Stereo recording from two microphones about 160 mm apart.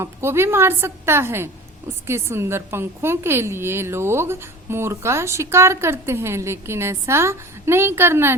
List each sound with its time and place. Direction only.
0.0 s a woman's voice: 15° right (ahead or behind)